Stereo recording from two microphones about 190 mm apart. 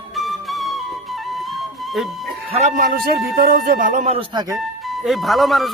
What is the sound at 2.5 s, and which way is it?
Speech, 35° right (ahead or behind).